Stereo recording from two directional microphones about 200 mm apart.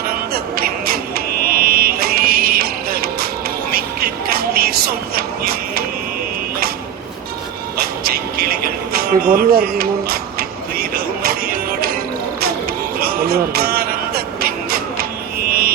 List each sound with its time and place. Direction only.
0.1 s a sound: 50° right (ahead or behind)
3.7 s music: 50° right (ahead or behind)
7.8 s music: 50° right (ahead or behind)
13.0 s music: 50° right (ahead or behind)
15.4 s mantra: 50° right (ahead or behind)